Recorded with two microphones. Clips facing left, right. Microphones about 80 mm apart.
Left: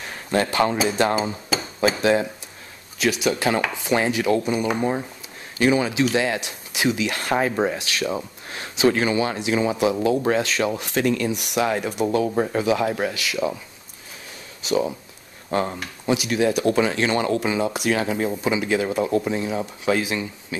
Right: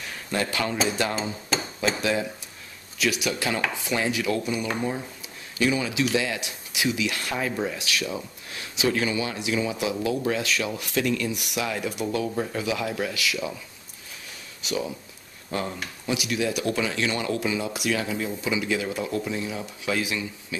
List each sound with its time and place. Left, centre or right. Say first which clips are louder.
0.0 s a sound: left 6 dB; left
0.8 s speech: left 6 dB; left
14.6 s speech: left 7 dB; left